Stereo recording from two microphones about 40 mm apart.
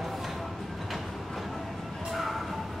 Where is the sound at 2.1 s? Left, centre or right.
Centre.